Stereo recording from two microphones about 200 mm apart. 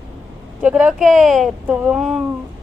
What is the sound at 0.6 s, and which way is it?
Speech, 5° right (ahead or behind).